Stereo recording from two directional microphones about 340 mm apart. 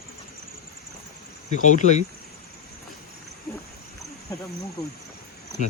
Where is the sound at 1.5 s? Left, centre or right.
Left.